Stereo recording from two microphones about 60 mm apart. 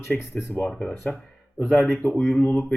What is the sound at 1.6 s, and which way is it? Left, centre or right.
Speech, centre.